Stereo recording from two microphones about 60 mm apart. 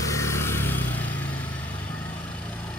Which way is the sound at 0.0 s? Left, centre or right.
Left.